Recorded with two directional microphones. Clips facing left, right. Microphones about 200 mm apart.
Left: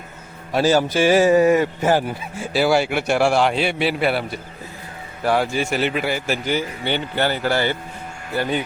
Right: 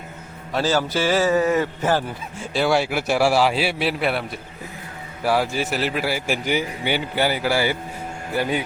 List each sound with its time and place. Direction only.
0.5 s speech: 15° left (ahead or behind); by 8.6 s 10° right (ahead or behind)